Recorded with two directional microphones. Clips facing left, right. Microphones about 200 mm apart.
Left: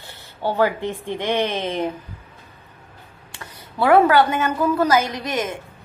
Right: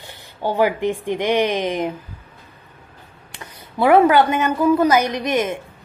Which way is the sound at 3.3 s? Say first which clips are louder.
Right 2 dB; 15° right (ahead or behind).